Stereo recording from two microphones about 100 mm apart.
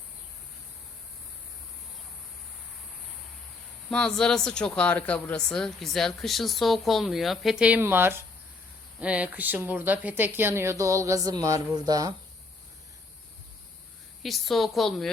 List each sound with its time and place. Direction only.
3.9 s speech: 5° left (ahead or behind); by 7.8 s 10° right (ahead or behind)
7.8 s speech: 20° right (ahead or behind); by 12.1 s 40° right (ahead or behind)
14.2 s speech: centre (ahead or behind)